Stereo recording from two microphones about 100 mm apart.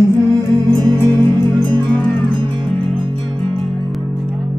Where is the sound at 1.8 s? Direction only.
15° left (ahead or behind).